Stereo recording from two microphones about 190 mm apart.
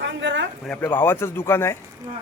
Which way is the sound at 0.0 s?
75° right (ahead or behind).